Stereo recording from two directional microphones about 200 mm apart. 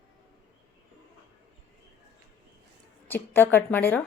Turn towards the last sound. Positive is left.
turn(degrees=10)  # may be behind; listen again after turning